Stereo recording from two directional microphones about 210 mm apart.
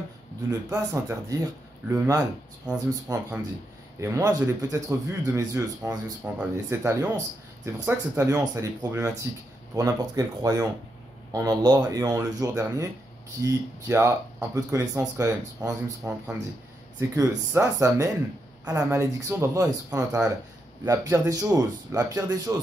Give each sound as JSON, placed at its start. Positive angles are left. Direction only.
{"t": 0.5, "sound": "speech", "side_deg": -15}